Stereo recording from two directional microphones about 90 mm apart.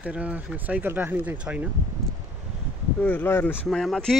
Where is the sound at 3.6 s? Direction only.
5° left (ahead or behind).